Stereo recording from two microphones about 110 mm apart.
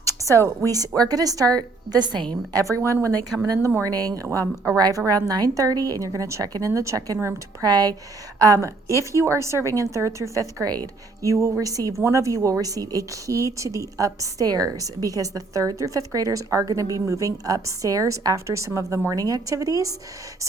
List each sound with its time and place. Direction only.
0.4 s a woman's voice: 30° right (ahead or behind)
2.6 s a woman's voice: 30° right (ahead or behind)